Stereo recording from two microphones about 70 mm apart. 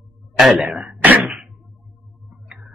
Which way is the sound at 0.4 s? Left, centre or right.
Centre.